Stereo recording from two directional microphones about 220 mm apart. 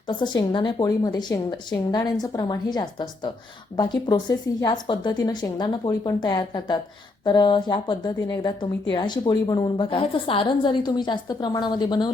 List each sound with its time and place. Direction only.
0.1 s a woman's voice: 20° left (ahead or behind)